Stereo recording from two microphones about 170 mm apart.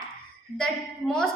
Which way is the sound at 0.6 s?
5° left (ahead or behind).